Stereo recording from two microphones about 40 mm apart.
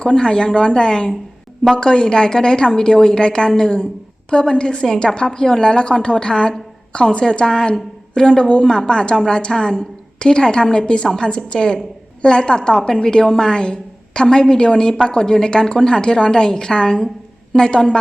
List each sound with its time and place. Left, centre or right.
0.0 s a woman's voice: left